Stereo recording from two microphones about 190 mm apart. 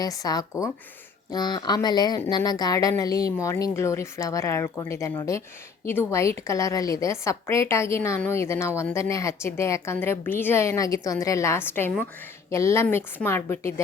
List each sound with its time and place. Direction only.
0.0 s a woman's voice: 20° left (ahead or behind)